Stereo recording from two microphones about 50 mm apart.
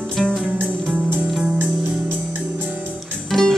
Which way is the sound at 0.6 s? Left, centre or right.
Right.